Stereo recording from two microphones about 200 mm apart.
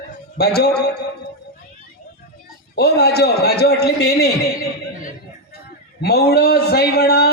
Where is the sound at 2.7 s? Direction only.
55° left (ahead or behind).